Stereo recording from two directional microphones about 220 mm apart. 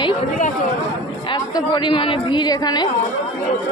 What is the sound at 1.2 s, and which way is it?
A woman's voice, 20° left (ahead or behind).